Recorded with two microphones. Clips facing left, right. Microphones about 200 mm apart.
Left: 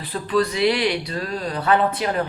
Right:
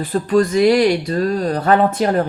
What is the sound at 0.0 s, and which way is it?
Speech, 45° right (ahead or behind).